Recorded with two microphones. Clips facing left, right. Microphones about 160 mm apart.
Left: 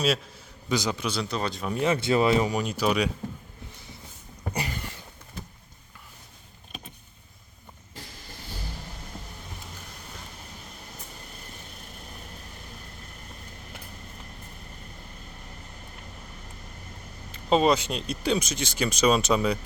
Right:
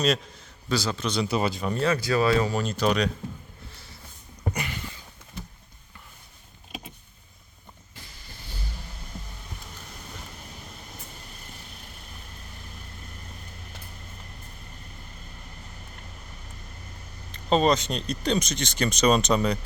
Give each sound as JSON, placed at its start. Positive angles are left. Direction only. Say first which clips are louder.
{"t": 0.7, "sound": "speech", "louder": "even", "side_deg": 15}
{"t": 1.3, "sound": "speech", "louder": "right 4 dB", "side_deg": -5}
{"t": 1.7, "sound": "speech", "louder": "left 3 dB", "side_deg": 20}
{"t": 4.5, "sound": "a sound", "louder": "left 5 dB", "side_deg": 35}
{"t": 17.3, "sound": "speech", "louder": "even", "side_deg": 5}